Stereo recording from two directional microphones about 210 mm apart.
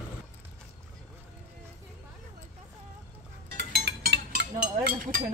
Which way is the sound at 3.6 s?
50° right (ahead or behind).